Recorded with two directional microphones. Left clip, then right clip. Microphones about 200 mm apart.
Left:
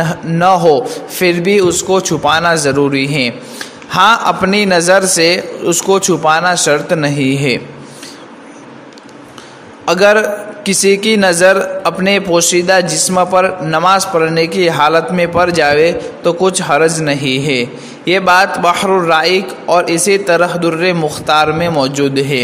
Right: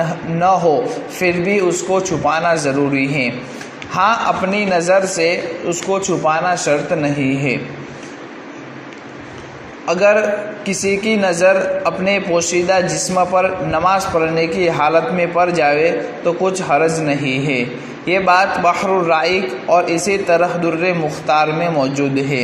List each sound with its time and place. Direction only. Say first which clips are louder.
0.0 s a man's voice: left 4 dB; 40° left (ahead or behind)
9.8 s a man's voice: left 4 dB; 40° left (ahead or behind)